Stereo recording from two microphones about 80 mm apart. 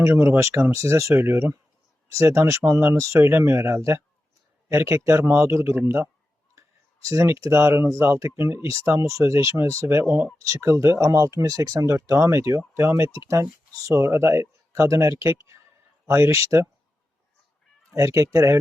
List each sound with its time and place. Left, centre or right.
0.0 s speech: right
6.6 s speech: right
10.4 s speech: right
17.9 s speech: right